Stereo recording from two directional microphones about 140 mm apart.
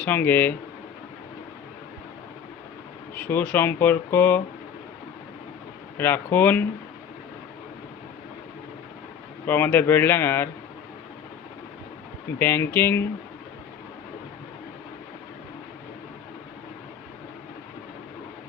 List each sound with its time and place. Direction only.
0.0 s speech: 15° left (ahead or behind)
3.2 s speech: 10° left (ahead or behind)
6.0 s speech: 15° left (ahead or behind)
9.5 s speech: 15° left (ahead or behind)
12.4 s speech: 15° left (ahead or behind)